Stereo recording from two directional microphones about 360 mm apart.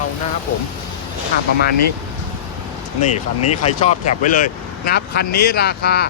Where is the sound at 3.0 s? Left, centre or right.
Centre.